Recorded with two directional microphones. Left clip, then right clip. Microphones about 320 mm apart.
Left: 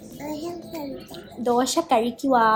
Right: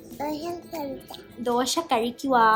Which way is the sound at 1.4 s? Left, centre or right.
Centre.